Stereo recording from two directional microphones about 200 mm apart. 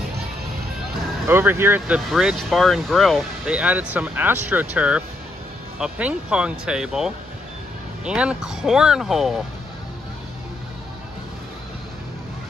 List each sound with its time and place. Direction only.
1.2 s speech: 10° right (ahead or behind)